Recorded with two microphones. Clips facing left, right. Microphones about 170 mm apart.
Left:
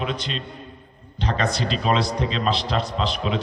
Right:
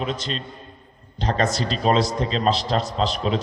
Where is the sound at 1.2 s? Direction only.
40° right (ahead or behind).